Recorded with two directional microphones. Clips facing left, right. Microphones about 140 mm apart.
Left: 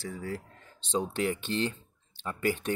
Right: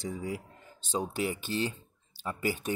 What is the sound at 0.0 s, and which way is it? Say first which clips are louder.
Speech: right 1 dB; 15° right (ahead or behind).